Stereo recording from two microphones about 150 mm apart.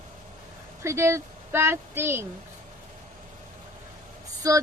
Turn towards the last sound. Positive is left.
turn(degrees=-20)  # may be behind; listen again after turning